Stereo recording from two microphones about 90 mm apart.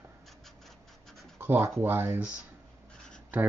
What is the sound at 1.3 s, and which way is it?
Speech, 25° right (ahead or behind).